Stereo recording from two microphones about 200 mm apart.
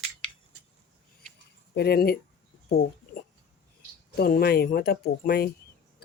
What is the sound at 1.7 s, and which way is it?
Speech, 55° left (ahead or behind).